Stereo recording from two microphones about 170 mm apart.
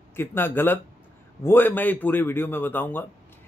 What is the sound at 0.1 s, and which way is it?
A man's voice, 15° left (ahead or behind).